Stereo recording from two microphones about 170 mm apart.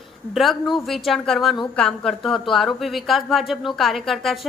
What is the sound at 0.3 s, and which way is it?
A woman's voice, centre (ahead or behind).